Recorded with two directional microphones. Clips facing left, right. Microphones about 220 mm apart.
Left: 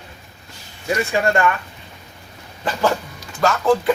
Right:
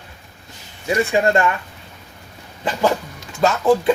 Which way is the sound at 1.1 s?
20° right (ahead or behind).